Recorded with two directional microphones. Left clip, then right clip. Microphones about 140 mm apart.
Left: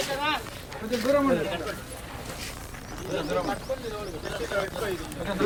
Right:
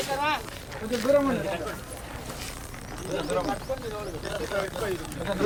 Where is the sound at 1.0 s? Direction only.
10° right (ahead or behind).